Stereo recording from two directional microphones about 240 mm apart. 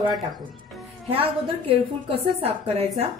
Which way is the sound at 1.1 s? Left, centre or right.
Right.